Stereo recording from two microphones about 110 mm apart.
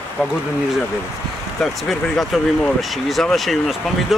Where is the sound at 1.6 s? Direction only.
Centre (ahead or behind).